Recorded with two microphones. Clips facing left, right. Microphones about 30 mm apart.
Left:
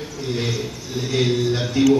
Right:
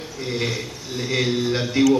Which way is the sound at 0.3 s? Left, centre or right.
Centre.